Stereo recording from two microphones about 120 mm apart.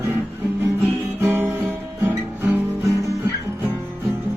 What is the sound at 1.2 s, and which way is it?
Guitar, 20° right (ahead or behind).